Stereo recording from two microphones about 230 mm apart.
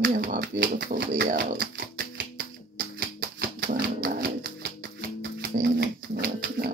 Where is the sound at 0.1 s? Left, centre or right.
Right.